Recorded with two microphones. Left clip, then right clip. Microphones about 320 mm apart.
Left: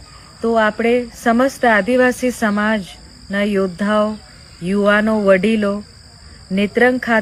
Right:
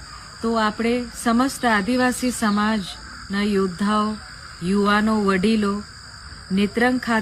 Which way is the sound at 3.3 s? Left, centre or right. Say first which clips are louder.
Left 5 dB; centre.